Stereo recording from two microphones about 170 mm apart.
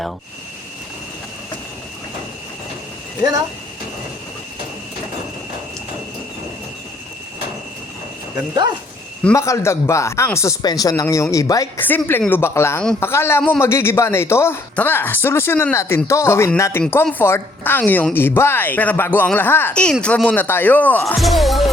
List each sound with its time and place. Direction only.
9.3 s a woman's voice: 15° left (ahead or behind)
21.2 s music: centre (ahead or behind)